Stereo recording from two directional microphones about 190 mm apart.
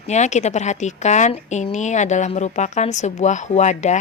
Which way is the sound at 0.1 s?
35° left (ahead or behind).